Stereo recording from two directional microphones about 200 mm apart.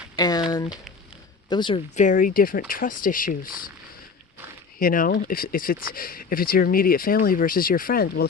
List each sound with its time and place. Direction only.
0.2 s a sound: 20° left (ahead or behind)
0.5 s speech: 20° left (ahead or behind)
2.0 s speech: 40° left (ahead or behind)
4.8 s speech: 45° left (ahead or behind)